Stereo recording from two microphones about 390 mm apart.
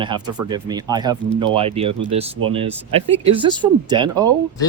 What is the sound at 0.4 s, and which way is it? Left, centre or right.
Speech, centre.